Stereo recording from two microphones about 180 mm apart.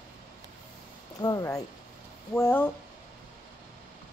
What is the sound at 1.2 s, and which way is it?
A woman's voice, 20° left (ahead or behind).